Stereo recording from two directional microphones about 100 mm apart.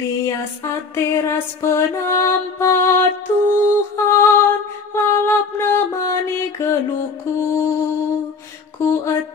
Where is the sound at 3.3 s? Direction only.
15° left (ahead or behind).